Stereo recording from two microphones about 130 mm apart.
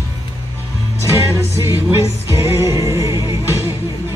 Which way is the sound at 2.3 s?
25° right (ahead or behind).